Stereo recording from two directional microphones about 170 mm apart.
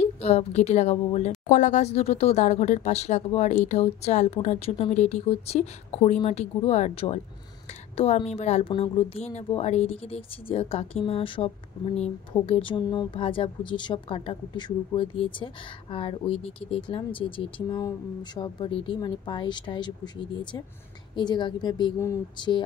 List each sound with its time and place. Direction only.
0.0 s a woman's voice: 40° left (ahead or behind)